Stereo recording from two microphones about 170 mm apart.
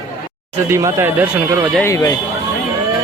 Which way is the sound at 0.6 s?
15° right (ahead or behind).